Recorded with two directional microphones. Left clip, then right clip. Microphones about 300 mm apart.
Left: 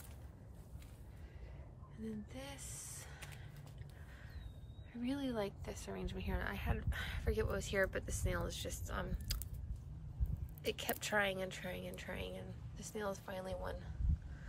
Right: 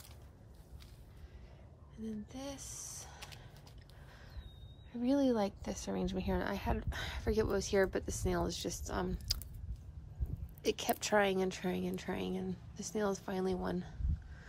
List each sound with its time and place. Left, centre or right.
2.0 s a sound: centre
4.9 s a woman's voice: centre
10.6 s speech: centre